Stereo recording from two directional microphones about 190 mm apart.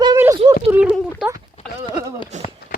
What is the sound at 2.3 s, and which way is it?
Speech, 40° right (ahead or behind).